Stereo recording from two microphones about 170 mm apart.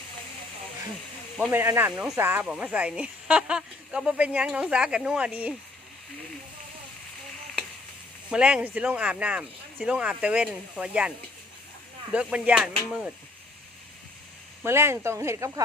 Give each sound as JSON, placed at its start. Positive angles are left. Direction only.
{"t": 1.5, "sound": "speech", "side_deg": -10}
{"t": 8.3, "sound": "speech", "side_deg": -5}
{"t": 12.1, "sound": "speech", "side_deg": -5}
{"t": 14.6, "sound": "speech", "side_deg": -15}